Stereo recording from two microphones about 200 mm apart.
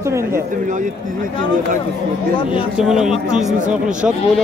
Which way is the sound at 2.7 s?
Centre (ahead or behind).